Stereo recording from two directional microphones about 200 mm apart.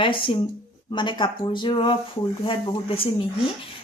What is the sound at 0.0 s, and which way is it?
Speech, 25° left (ahead or behind).